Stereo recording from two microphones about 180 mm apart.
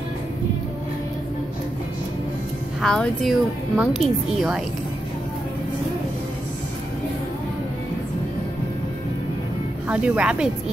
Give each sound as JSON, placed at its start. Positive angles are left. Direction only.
{"t": 2.8, "sound": "a woman's voice", "side_deg": 5}
{"t": 9.8, "sound": "speech", "side_deg": -5}